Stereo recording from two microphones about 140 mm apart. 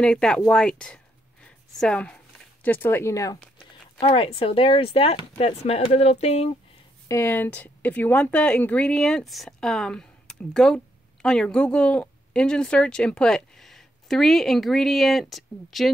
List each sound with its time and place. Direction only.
0.0 s a woman's voice: 5° left (ahead or behind); by 3.3 s 20° left (ahead or behind)
4.0 s speech: 40° left (ahead or behind)
7.1 s a woman's voice: 20° left (ahead or behind); by 15.9 s centre (ahead or behind)